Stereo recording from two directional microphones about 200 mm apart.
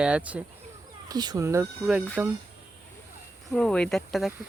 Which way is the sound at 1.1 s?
20° right (ahead or behind).